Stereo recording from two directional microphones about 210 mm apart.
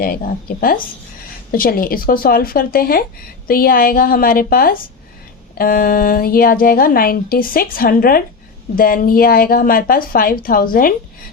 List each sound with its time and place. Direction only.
0.0 s a woman's voice: 45° left (ahead or behind)